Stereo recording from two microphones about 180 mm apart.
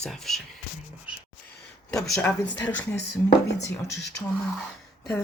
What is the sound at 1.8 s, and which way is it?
Speech, 5° left (ahead or behind).